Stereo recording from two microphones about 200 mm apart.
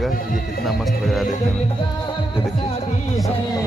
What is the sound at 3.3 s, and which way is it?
Speech, 20° left (ahead or behind).